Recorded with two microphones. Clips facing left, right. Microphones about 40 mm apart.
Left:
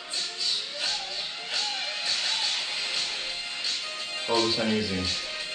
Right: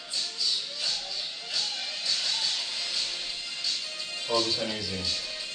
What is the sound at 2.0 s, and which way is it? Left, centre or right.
Music, left.